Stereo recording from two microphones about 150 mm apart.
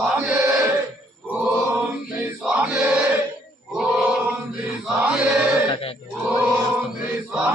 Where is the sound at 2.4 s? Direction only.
10° right (ahead or behind).